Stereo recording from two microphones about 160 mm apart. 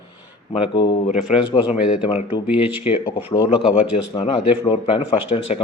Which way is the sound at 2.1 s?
35° left (ahead or behind).